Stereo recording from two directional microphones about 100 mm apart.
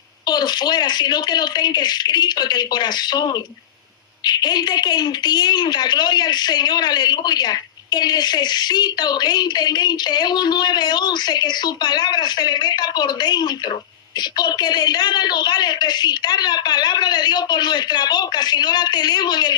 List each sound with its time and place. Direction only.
0.3 s a woman's voice: 45° left (ahead or behind)